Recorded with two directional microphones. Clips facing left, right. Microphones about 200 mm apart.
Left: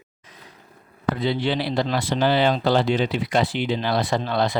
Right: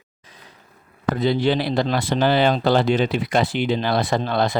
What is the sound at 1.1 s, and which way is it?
Speech, 45° right (ahead or behind).